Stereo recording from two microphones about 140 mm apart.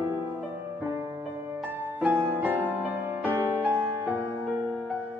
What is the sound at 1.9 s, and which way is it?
Music, 10° right (ahead or behind).